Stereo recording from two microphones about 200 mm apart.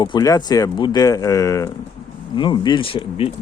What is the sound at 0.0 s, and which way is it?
Speech, 20° left (ahead or behind).